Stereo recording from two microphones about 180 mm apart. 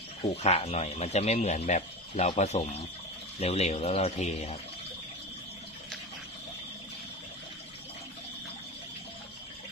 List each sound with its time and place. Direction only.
0.2 s speech: 35° left (ahead or behind)